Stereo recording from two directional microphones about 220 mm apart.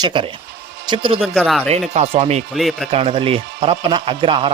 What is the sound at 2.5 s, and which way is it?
Speech, centre (ahead or behind).